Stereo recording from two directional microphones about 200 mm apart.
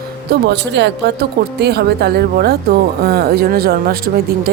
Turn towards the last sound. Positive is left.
turn(degrees=-50)  # may be behind; listen again after turning